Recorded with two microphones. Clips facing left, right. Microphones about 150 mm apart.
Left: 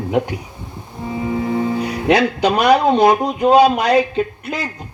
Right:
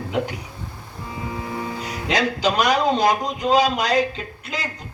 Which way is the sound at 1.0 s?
65° left (ahead or behind).